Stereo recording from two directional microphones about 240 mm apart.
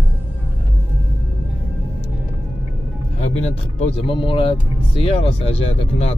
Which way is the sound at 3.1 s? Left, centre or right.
Left.